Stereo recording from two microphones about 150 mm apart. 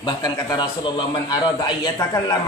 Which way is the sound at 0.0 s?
30° left (ahead or behind).